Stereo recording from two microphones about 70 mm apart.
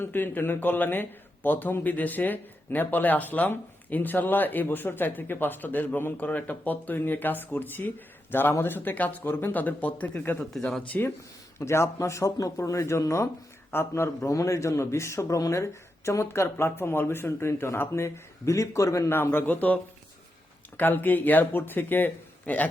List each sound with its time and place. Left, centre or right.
0.0 s a man's voice: left
10.5 s speech: centre
10.8 s a man's voice: left
11.6 s a man's voice: left
13.7 s a man's voice: left
19.1 s a man's voice: left